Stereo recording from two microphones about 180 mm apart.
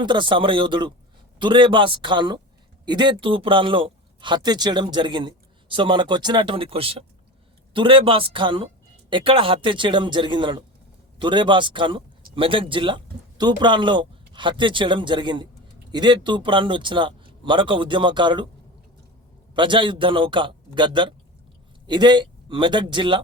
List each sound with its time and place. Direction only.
0.0 s a man's voice: 25° right (ahead or behind)
19.5 s a man's voice: 25° right (ahead or behind)